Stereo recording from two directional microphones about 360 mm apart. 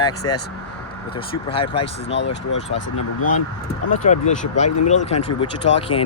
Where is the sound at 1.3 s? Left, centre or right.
Centre.